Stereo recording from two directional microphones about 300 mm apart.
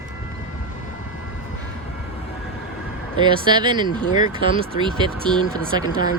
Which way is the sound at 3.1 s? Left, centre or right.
Centre.